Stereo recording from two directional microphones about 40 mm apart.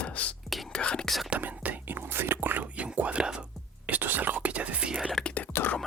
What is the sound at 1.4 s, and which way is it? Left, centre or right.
Whispering, right.